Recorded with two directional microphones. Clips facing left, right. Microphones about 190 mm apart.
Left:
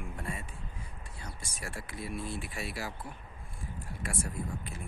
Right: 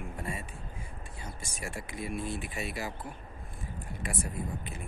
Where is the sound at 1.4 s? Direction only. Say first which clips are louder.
Right 3 dB; 50° right (ahead or behind).